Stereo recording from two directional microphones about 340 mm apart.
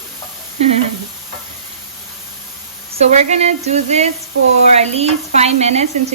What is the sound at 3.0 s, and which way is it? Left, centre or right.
Speech, centre.